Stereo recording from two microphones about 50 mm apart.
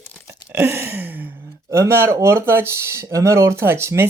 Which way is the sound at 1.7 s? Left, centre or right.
Right.